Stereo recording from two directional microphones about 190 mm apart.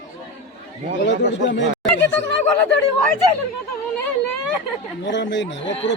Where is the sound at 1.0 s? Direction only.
70° left (ahead or behind).